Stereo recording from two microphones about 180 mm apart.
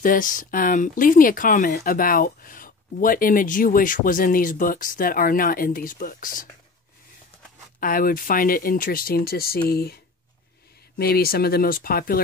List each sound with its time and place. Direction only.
0.0 s speech: 50° left (ahead or behind)
7.8 s speech: 50° left (ahead or behind)
11.0 s speech: 60° left (ahead or behind)